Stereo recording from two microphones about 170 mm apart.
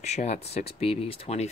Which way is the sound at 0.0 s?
40° left (ahead or behind).